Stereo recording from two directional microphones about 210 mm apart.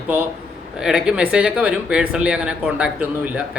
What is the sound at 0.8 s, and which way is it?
Speech, 5° right (ahead or behind).